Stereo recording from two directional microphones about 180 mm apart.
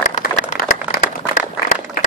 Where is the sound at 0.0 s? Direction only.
40° left (ahead or behind).